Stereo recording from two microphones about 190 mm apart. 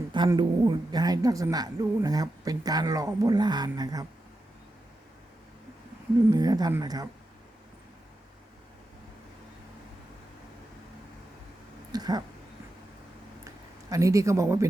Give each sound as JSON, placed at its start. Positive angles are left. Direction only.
{"t": 0.1, "sound": "a woman's voice", "side_deg": -25}
{"t": 6.3, "sound": "a woman's voice", "side_deg": -20}
{"t": 11.9, "sound": "a sound", "side_deg": -20}
{"t": 13.9, "sound": "speech", "side_deg": -15}